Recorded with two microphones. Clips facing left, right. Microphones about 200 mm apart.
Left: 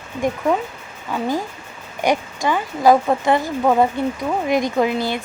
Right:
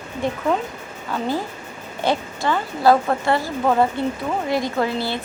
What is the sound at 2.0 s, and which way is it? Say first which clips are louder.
Speech: left 2 dB; 15° left (ahead or behind).